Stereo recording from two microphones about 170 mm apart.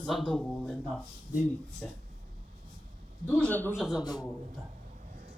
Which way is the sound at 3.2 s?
10° left (ahead or behind).